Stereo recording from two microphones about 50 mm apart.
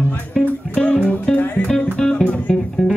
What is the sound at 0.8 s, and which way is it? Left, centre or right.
Music, centre.